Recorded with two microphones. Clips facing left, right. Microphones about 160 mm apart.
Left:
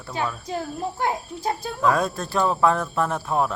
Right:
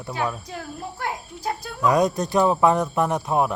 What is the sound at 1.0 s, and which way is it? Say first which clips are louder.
Speech: left 3 dB; 25° left (ahead or behind).